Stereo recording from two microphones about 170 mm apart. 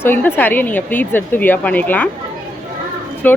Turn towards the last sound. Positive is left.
turn(degrees=10)  # may be behind; listen again after turning